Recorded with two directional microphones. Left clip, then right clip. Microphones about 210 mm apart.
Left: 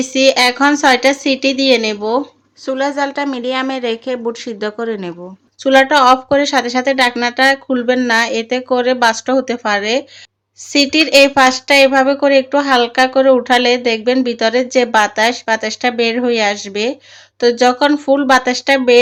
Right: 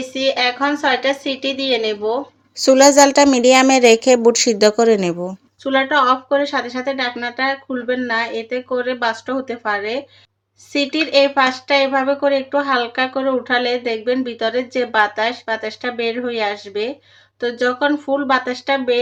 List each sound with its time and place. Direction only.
0.0 s speech: 40° left (ahead or behind)
2.6 s a woman's voice: 30° right (ahead or behind)
5.6 s speech: 35° left (ahead or behind)